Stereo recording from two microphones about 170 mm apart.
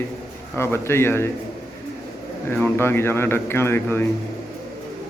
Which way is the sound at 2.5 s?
15° left (ahead or behind).